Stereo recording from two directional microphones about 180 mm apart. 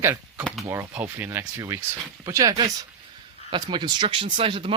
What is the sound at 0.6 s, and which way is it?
Speech, 10° right (ahead or behind).